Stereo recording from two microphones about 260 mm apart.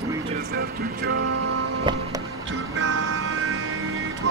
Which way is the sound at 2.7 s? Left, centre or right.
Right.